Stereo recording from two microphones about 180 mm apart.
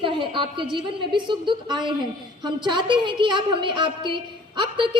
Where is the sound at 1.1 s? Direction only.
25° right (ahead or behind).